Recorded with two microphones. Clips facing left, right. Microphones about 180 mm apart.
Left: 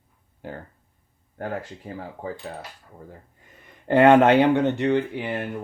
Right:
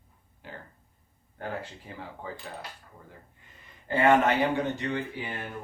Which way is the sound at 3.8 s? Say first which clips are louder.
Left 8 dB; 65° left (ahead or behind).